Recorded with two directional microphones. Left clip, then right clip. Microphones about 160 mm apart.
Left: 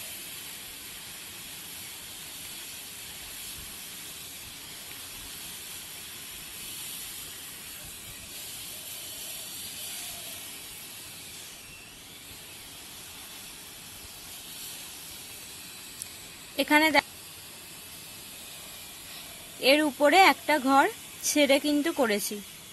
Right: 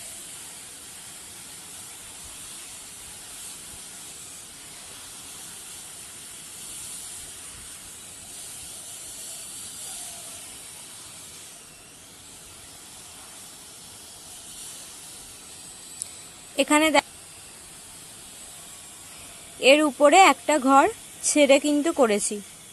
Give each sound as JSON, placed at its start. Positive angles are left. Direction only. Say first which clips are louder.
{"t": 16.5, "sound": "a woman's voice", "louder": "right 2 dB", "side_deg": -30}
{"t": 19.6, "sound": "speech", "louder": "right 5 dB", "side_deg": -25}